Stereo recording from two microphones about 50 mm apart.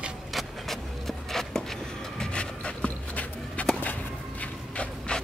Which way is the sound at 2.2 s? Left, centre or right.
Left.